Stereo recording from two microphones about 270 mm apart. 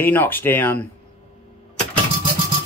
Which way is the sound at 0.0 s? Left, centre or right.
Centre.